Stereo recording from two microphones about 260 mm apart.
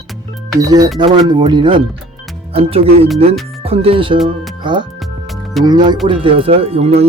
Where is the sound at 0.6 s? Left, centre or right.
Centre.